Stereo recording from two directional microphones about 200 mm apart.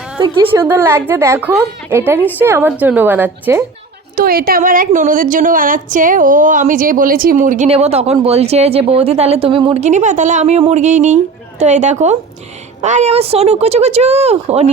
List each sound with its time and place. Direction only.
0.2 s a woman's voice: 25° right (ahead or behind)
0.6 s a woman's voice: 10° right (ahead or behind)
4.1 s a woman's voice: 45° right (ahead or behind); by 14.7 s 30° right (ahead or behind)